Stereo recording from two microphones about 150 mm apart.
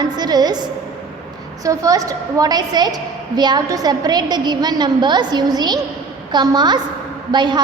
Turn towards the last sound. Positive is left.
turn(degrees=-30)  # may be behind; listen again after turning